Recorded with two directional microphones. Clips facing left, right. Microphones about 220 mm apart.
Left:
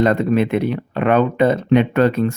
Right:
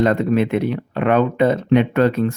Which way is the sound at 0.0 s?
35° left (ahead or behind).